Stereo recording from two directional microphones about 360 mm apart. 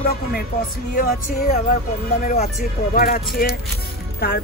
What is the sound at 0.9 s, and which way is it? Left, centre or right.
Speech, left.